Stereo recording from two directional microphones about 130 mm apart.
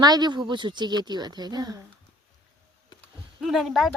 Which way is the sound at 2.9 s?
35° left (ahead or behind).